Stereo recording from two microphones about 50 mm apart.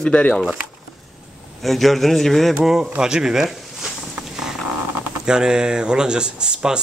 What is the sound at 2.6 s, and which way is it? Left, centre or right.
Speech, centre.